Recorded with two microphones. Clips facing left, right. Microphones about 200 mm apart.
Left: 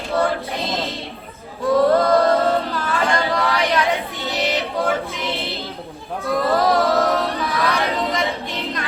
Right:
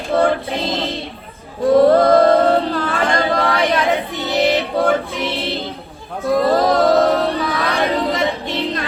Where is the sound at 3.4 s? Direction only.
30° right (ahead or behind).